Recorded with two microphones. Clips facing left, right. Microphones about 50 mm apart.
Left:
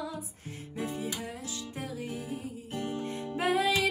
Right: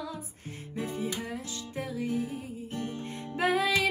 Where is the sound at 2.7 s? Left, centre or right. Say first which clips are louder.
Left 1 dB; left.